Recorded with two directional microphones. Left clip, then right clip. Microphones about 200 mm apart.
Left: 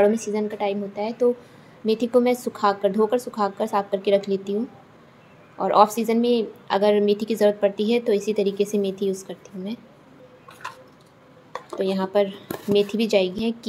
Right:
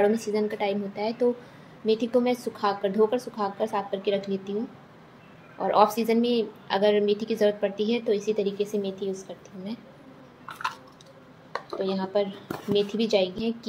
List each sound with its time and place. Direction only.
0.2 s a woman's voice: 15° left (ahead or behind)
1.9 s a woman's voice: 20° left (ahead or behind)
5.6 s a woman's voice: 20° left (ahead or behind)
11.8 s a woman's voice: 25° left (ahead or behind)